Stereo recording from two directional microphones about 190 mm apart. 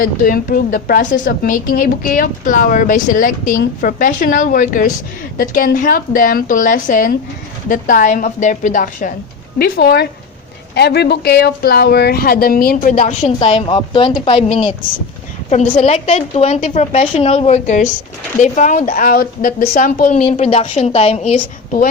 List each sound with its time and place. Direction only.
0.0 s a woman's voice: 50° left (ahead or behind)
13.5 s a woman's voice: 30° left (ahead or behind)